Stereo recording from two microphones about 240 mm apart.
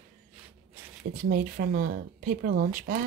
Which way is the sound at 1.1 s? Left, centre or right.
Right.